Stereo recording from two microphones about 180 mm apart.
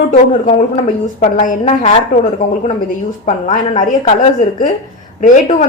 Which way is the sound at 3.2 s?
45° left (ahead or behind).